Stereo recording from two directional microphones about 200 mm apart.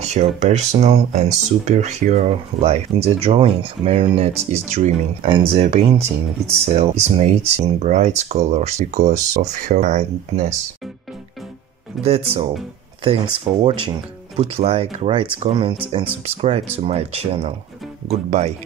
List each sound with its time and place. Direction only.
0.0 s speech: 35° right (ahead or behind)
12.0 s speech: 30° right (ahead or behind)